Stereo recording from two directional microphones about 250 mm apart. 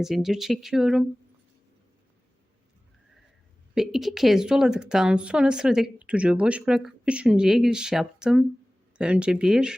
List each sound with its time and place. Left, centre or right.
0.0 s a woman's voice: centre
3.8 s a woman's voice: centre